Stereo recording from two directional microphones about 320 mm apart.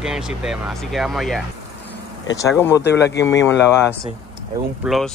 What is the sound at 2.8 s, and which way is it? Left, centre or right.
Speech, left.